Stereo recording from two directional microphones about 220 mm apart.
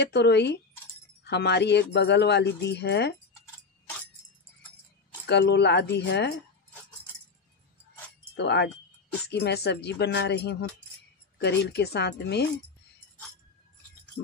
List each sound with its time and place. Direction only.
0.0 s speech: 50° left (ahead or behind)
5.2 s speech: 50° left (ahead or behind)
8.2 s a sound: 50° left (ahead or behind)
9.3 s speech: 50° left (ahead or behind)